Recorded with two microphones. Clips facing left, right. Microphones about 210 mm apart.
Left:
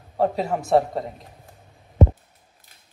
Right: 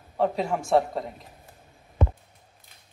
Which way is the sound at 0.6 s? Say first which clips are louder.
Left 4 dB; centre (ahead or behind).